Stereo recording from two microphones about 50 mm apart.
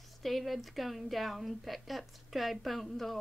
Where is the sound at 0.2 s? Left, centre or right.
Centre.